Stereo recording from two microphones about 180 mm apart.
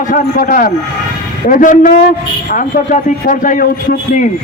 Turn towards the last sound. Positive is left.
turn(degrees=50)  # may be behind; listen again after turning